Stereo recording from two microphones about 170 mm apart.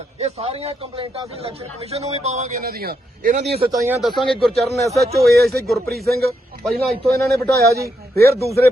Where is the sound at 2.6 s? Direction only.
65° right (ahead or behind).